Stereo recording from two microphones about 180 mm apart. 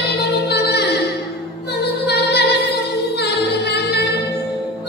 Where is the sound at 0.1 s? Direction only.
65° left (ahead or behind).